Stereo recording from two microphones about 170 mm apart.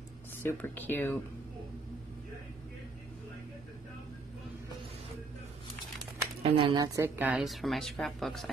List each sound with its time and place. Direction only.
0.4 s speech: 10° left (ahead or behind)
6.4 s speech: 35° right (ahead or behind)
6.8 s speech: 15° right (ahead or behind)